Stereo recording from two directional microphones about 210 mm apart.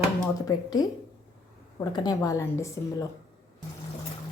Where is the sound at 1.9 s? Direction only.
20° left (ahead or behind).